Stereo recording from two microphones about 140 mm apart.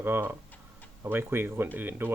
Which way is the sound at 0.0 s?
15° right (ahead or behind).